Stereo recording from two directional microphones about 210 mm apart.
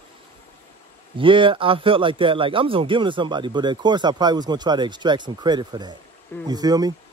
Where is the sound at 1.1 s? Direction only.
25° right (ahead or behind).